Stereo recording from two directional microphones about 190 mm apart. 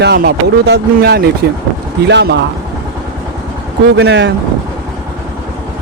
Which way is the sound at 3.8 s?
65° right (ahead or behind).